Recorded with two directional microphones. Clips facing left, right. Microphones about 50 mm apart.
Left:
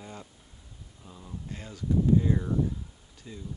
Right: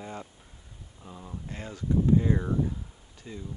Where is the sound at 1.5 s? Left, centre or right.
Right.